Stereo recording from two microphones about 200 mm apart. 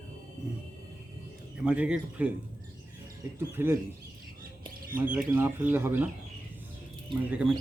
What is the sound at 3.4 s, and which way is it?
Speech, 10° right (ahead or behind).